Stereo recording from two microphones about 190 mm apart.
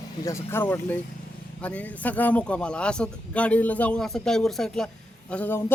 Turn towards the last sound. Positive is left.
turn(degrees=10)  # may be behind; listen again after turning